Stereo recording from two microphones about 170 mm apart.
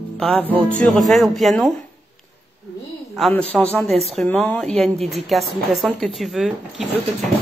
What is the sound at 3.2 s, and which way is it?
A woman's voice, 5° left (ahead or behind).